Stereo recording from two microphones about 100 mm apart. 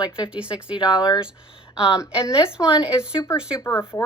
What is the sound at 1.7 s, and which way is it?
Speech, 10° right (ahead or behind).